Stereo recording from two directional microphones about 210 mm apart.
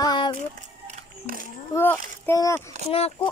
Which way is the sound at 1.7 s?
10° left (ahead or behind).